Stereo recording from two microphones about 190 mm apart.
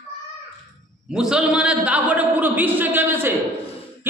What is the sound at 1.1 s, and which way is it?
A man's voice, 5° right (ahead or behind).